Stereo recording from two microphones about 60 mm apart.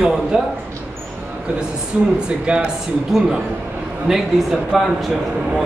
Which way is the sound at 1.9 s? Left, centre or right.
Centre.